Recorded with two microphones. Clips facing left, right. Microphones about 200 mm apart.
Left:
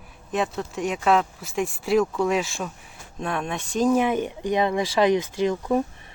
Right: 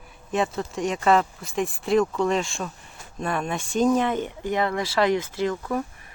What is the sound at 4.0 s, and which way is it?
Speech, 10° left (ahead or behind).